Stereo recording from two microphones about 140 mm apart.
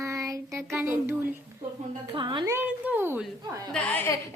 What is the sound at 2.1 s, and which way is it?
Speech, 35° right (ahead or behind).